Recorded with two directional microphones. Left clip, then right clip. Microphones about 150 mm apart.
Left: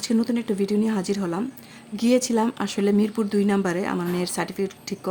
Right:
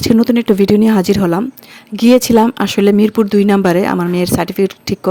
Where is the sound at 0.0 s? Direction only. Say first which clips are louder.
Right 13 dB; 60° right (ahead or behind).